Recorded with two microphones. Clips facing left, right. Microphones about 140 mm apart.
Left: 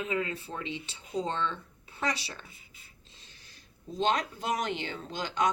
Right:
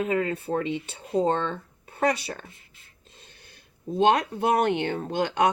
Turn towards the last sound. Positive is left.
turn(degrees=-60)  # may be behind; listen again after turning